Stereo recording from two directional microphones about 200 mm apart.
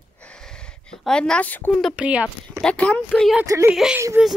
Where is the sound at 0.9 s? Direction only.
5° left (ahead or behind).